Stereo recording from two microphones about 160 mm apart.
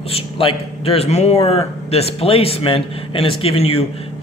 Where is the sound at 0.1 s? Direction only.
35° left (ahead or behind).